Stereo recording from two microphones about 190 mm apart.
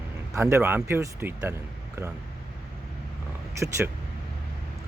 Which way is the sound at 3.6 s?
15° right (ahead or behind).